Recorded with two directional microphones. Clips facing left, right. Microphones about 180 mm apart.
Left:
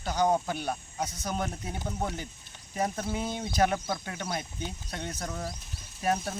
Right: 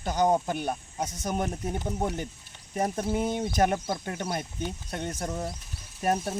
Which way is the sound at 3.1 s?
50° right (ahead or behind).